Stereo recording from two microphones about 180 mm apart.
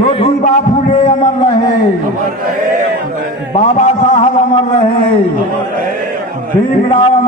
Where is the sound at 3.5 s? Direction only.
40° left (ahead or behind).